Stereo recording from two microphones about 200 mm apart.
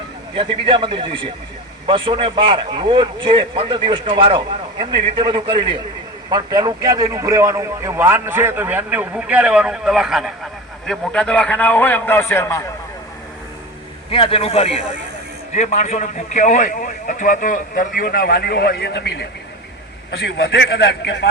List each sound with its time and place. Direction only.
0.3 s a man's voice: 25° right (ahead or behind); by 12.6 s 10° left (ahead or behind)
14.1 s a man's voice: 30° left (ahead or behind); by 21.2 s 60° left (ahead or behind)